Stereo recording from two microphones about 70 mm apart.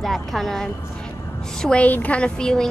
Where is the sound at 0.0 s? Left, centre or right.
Centre.